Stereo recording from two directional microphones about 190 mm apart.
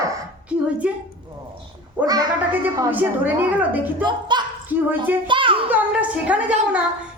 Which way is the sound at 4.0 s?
25° right (ahead or behind).